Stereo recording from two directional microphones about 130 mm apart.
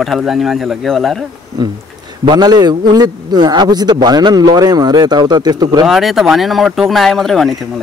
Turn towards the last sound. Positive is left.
turn(degrees=0)  # may be behind; listen again after turning